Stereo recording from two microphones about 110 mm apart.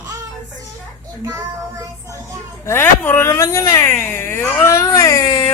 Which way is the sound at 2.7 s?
20° left (ahead or behind).